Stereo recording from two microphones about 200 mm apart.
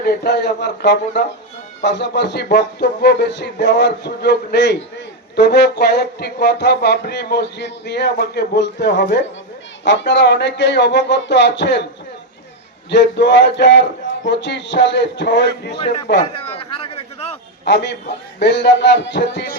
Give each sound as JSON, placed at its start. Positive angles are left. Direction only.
{"t": 0.0, "sound": "music", "side_deg": 55}
{"t": 12.9, "sound": "music", "side_deg": 60}
{"t": 15.8, "sound": "speech", "side_deg": 30}
{"t": 16.3, "sound": "a sound", "side_deg": 30}
{"t": 17.7, "sound": "music", "side_deg": 60}